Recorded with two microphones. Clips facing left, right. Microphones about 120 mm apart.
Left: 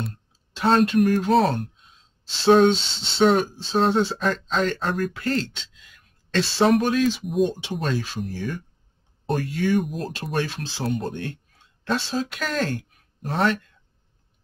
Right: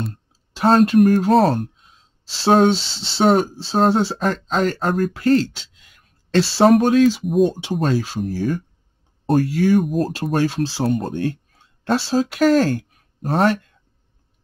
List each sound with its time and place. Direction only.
0.6 s speech: 40° right (ahead or behind)
4.2 s speech: 45° right (ahead or behind)
7.2 s speech: centre (ahead or behind)
7.7 s speech: 40° right (ahead or behind)
9.8 s speech: centre (ahead or behind)
10.3 s speech: 35° right (ahead or behind)